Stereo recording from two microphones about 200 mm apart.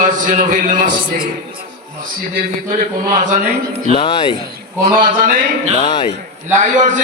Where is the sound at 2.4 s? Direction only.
40° right (ahead or behind).